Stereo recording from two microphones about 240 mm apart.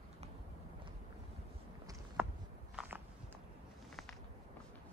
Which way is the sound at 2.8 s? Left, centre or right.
Centre.